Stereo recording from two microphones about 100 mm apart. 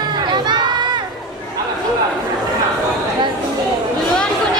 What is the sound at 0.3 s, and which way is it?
Crowd, 50° right (ahead or behind).